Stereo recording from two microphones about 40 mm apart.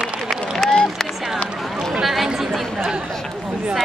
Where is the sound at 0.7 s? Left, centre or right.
Centre.